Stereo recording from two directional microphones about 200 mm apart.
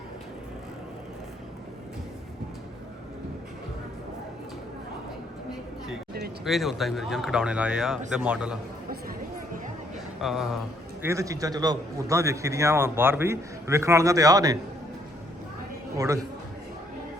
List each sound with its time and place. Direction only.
6.4 s speech: centre (ahead or behind)
10.2 s speech: centre (ahead or behind)
11.0 s a man's voice: 15° right (ahead or behind)
16.0 s a man's voice: 15° right (ahead or behind)